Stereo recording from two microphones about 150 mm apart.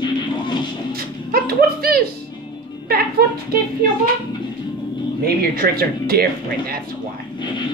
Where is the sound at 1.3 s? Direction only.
85° right.